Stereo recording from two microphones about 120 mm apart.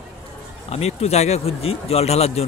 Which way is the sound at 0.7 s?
60° left (ahead or behind).